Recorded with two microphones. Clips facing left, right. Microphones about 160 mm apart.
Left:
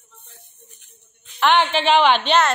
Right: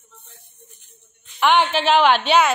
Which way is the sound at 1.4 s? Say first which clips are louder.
Even; 10° right (ahead or behind).